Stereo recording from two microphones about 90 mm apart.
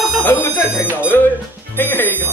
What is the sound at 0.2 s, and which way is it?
Speech, 25° left (ahead or behind).